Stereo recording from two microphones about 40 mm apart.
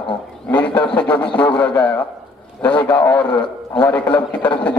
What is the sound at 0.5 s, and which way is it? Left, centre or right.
A man's voice, left.